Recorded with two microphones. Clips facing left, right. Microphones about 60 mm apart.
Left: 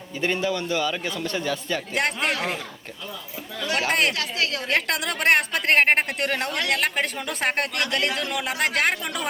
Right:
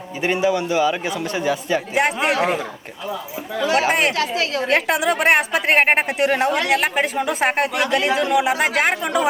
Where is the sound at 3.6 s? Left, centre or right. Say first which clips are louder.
Right 5 dB; centre.